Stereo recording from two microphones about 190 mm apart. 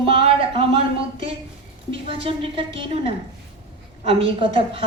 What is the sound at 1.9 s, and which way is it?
A woman's voice, 30° right (ahead or behind).